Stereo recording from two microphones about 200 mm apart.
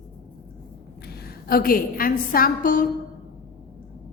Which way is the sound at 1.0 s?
50° left (ahead or behind).